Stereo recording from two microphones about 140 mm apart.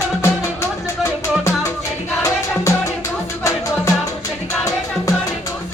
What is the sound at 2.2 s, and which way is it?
Music, 20° left (ahead or behind).